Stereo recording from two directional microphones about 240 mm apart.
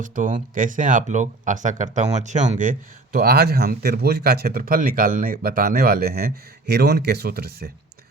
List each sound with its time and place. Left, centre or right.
0.0 s speech: right